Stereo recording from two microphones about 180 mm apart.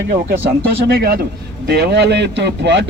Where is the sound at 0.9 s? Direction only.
60° right (ahead or behind); by 2.9 s 75° right (ahead or behind).